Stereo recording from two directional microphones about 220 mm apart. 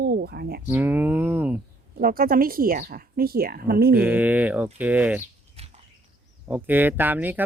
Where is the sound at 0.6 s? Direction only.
10° right (ahead or behind).